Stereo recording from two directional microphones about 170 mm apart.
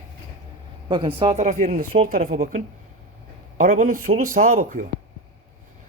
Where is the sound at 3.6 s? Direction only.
50° right (ahead or behind).